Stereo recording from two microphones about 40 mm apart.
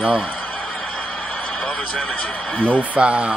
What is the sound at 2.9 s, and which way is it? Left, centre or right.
Speech, right.